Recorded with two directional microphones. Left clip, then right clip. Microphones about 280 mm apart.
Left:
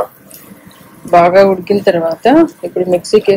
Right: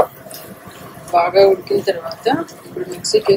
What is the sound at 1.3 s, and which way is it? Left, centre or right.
Speech, left.